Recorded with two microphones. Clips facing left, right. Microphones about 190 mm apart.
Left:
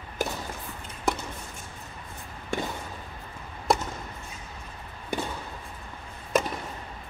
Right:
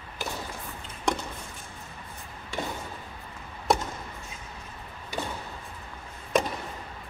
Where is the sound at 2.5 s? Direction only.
50° left (ahead or behind).